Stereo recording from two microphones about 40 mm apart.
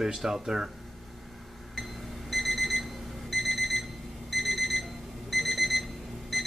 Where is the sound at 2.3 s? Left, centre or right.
Centre.